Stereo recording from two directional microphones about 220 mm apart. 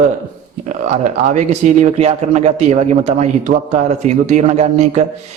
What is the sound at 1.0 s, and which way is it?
A man's voice, 35° right (ahead or behind).